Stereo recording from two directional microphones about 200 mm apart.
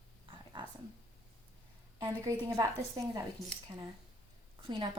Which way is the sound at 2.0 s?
15° right (ahead or behind).